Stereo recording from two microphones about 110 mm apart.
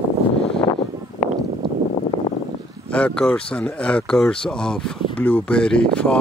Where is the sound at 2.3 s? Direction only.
40° left (ahead or behind).